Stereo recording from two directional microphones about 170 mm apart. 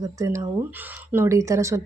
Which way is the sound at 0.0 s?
20° right (ahead or behind).